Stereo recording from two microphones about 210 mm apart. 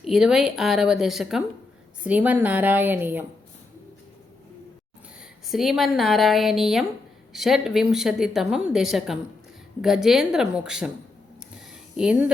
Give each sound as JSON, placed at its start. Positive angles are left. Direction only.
{"t": 0.0, "sound": "a woman's voice", "side_deg": 0}
{"t": 5.5, "sound": "a woman's voice", "side_deg": 0}
{"t": 11.5, "sound": "a sound", "side_deg": -5}